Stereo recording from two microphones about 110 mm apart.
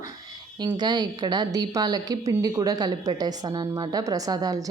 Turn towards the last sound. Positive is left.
turn(degrees=-35)  # may be behind; listen again after turning